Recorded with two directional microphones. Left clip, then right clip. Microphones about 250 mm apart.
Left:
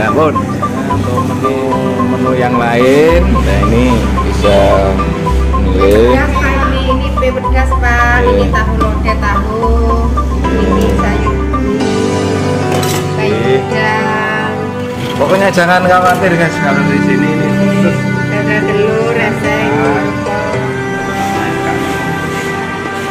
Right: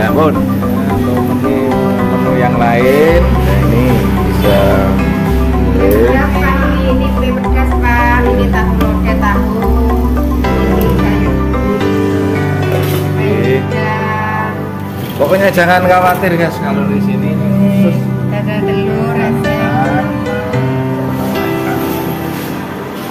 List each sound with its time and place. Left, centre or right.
2.4 s speech: centre
15.3 s speech: centre